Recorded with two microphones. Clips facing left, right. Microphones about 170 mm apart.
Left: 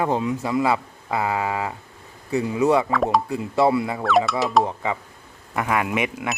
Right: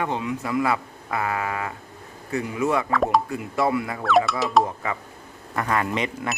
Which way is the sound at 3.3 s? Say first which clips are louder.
Left 4 dB; 25° left (ahead or behind).